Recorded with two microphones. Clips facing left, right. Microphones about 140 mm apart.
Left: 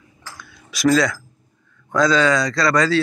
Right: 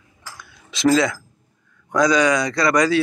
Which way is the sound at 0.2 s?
20° right (ahead or behind).